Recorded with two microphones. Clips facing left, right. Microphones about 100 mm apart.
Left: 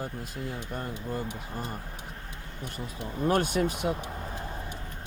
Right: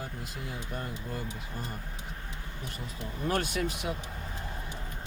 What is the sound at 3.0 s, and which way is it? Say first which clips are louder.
Speech: left 5 dB; 30° left (ahead or behind).